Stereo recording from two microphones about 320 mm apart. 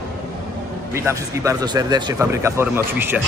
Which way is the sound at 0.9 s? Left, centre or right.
Centre.